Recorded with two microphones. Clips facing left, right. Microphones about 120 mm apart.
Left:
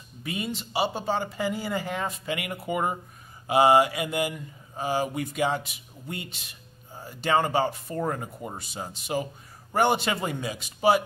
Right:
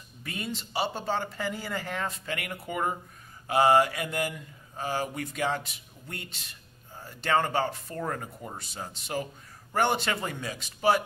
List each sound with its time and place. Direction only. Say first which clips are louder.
0.2 s speech: left 4 dB; 10° left (ahead or behind)